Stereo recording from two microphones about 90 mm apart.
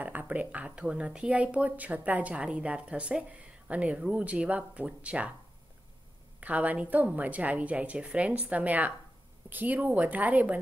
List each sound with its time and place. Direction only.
0.0 s speech: 20° right (ahead or behind)
6.4 s speech: 15° right (ahead or behind)